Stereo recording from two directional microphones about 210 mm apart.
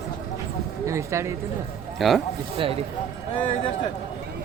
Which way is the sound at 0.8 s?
15° right (ahead or behind).